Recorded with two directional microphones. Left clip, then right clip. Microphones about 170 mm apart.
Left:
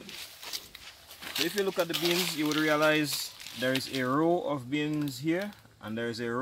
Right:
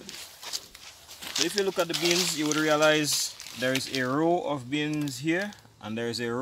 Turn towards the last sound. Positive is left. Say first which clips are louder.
# right 3 dB
turn(degrees=-35)  # may be behind; listen again after turning